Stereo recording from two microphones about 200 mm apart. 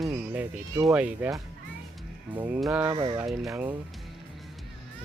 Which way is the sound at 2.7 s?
15° right (ahead or behind).